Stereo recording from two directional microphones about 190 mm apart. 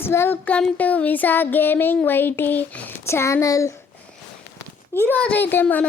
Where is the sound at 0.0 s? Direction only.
10° left (ahead or behind).